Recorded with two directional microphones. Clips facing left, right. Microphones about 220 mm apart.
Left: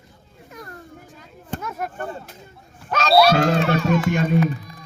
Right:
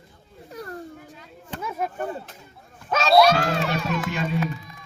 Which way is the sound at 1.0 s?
45° left (ahead or behind).